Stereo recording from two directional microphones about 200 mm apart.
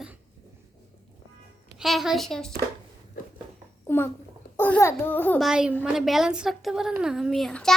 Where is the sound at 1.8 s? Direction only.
Centre (ahead or behind).